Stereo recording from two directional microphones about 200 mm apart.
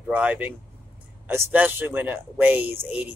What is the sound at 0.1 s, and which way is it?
A man's voice, 5° right (ahead or behind).